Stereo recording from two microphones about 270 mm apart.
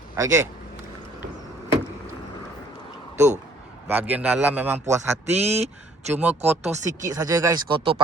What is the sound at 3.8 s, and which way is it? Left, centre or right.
Speech, centre.